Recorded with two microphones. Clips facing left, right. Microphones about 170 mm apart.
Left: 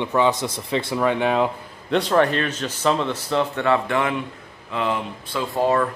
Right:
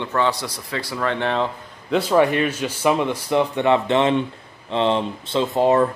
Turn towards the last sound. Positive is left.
turn(degrees=-20)  # may be behind; listen again after turning